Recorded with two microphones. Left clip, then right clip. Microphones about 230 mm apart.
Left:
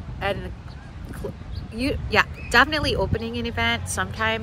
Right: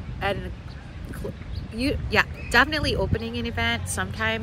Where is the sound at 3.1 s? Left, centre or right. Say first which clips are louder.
Left 1 dB; centre.